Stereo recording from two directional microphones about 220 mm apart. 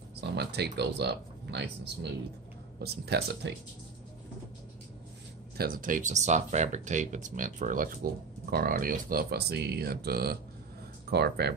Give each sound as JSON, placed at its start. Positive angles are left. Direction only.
{"t": 0.2, "sound": "speech", "side_deg": -50}
{"t": 2.8, "sound": "speech", "side_deg": -45}
{"t": 5.6, "sound": "speech", "side_deg": -40}